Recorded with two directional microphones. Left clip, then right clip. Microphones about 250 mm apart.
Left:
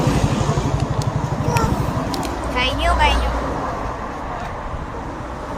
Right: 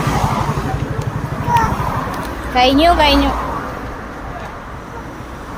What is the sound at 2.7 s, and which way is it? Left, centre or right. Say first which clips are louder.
Speech: right 5 dB; right.